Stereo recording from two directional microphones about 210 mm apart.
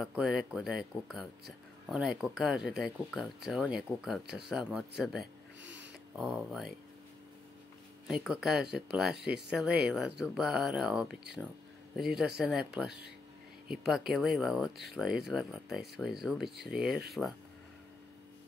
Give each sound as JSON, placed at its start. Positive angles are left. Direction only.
{"t": 0.0, "sound": "speech", "side_deg": 0}
{"t": 5.2, "sound": "a sound", "side_deg": -60}
{"t": 6.1, "sound": "speech", "side_deg": 0}
{"t": 8.1, "sound": "a man's voice", "side_deg": -5}